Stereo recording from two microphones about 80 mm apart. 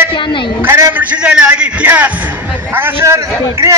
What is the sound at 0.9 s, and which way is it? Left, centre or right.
A man's voice, centre.